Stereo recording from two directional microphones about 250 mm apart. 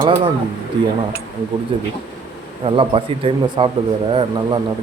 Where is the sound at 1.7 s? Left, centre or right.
Right.